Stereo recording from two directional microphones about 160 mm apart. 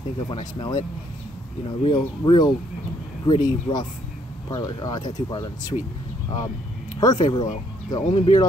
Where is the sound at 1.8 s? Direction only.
30° left (ahead or behind).